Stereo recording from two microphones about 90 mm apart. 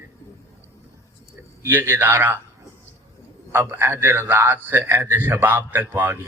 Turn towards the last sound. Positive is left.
turn(degrees=-25)  # may be behind; listen again after turning